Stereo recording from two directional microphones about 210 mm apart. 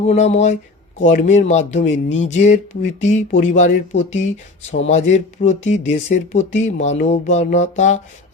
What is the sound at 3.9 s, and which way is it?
Speech, 60° left (ahead or behind).